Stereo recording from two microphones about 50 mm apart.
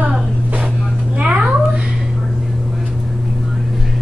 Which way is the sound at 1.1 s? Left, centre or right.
Right.